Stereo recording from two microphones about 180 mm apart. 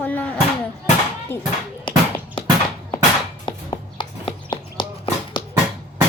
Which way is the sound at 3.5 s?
25° left (ahead or behind).